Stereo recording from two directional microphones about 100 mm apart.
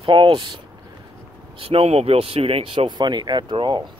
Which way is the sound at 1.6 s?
80° right.